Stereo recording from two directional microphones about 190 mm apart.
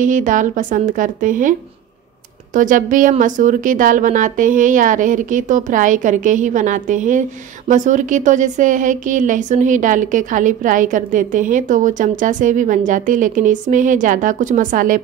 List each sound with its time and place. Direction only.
0.0 s speech: 40° right (ahead or behind)
2.5 s speech: 45° right (ahead or behind)